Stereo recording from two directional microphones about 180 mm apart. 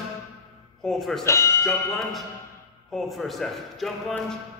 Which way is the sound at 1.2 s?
15° left (ahead or behind).